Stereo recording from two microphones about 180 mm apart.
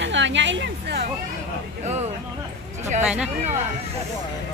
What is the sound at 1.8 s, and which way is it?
Speech, 40° right (ahead or behind).